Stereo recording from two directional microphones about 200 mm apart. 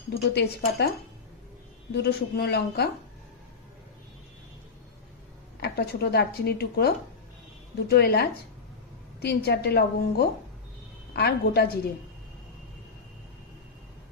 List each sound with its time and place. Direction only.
0.3 s a woman's voice: 55° left (ahead or behind)
1.9 s a woman's voice: 55° left (ahead or behind)
5.5 s a woman's voice: 55° left (ahead or behind)